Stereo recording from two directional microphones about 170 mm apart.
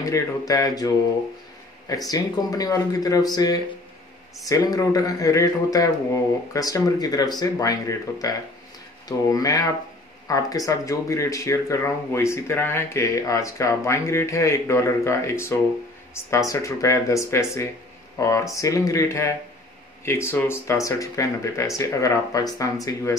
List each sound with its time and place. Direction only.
0.0 s speech: 20° left (ahead or behind)
2.0 s speech: 20° left (ahead or behind)